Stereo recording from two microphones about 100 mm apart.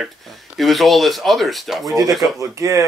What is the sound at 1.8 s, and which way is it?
Speech, 35° right (ahead or behind).